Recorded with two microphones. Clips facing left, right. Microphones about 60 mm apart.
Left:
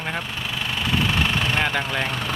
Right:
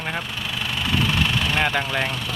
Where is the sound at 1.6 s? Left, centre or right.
Centre.